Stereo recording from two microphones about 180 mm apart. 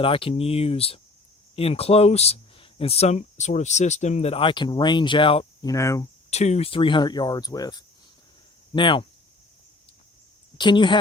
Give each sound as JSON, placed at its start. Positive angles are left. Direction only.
{"t": 0.0, "sound": "speech", "side_deg": 30}
{"t": 5.7, "sound": "speech", "side_deg": 15}
{"t": 6.3, "sound": "cricket", "side_deg": 40}
{"t": 10.6, "sound": "cricket", "side_deg": 25}